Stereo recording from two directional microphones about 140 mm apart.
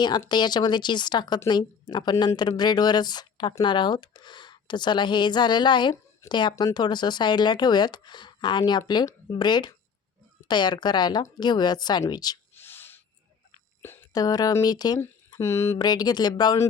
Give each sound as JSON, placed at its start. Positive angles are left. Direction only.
{"t": 0.3, "sound": "speech", "side_deg": 30}
{"t": 12.5, "sound": "a sound", "side_deg": 15}
{"t": 13.8, "sound": "whispering", "side_deg": 15}
{"t": 14.1, "sound": "speech", "side_deg": 25}
{"t": 15.4, "sound": "speech", "side_deg": 20}
{"t": 15.8, "sound": "speech", "side_deg": 30}